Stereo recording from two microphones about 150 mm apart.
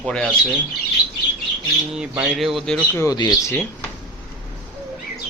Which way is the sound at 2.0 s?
5° right (ahead or behind).